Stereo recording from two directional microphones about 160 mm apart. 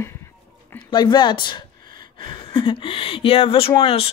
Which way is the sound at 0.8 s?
30° left (ahead or behind).